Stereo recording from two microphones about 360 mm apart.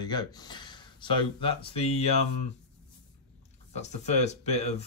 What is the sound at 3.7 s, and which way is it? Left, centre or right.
Speech, centre.